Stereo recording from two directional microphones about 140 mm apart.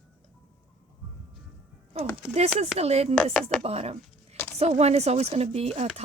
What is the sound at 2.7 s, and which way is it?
Speech, 50° right (ahead or behind).